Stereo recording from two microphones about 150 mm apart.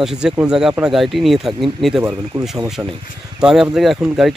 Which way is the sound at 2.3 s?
20° right (ahead or behind).